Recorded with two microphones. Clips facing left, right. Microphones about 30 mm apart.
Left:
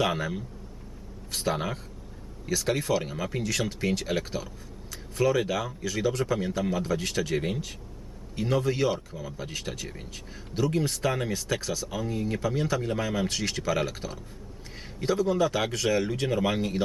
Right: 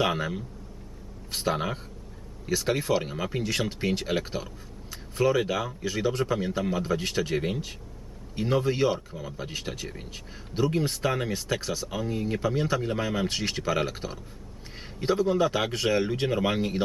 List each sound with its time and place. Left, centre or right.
0.0 s speech: centre